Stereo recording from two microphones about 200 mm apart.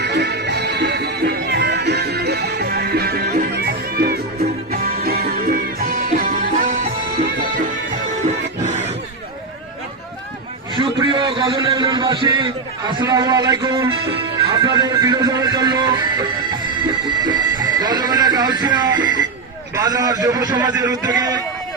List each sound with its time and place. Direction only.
0.0 s music: 60° right (ahead or behind); by 6.9 s 40° right (ahead or behind)
8.2 s music: 35° right (ahead or behind)
10.8 s a sound: 25° right (ahead or behind)
12.9 s music: 20° right (ahead or behind)